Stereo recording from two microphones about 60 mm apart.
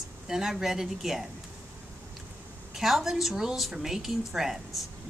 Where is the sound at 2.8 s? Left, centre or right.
Centre.